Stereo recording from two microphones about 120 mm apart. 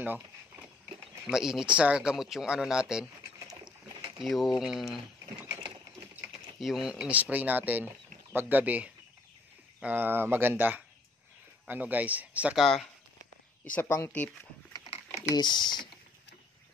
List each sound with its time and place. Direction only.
0.0 s a sound: 15° right (ahead or behind)
1.2 s speech: 5° right (ahead or behind)
4.2 s speech: centre (ahead or behind)
6.6 s speech: 5° right (ahead or behind)
13.7 s speech: 20° left (ahead or behind)
15.2 s speech: 35° left (ahead or behind)